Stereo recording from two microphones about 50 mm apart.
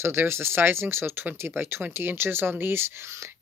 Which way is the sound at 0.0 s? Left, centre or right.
Right.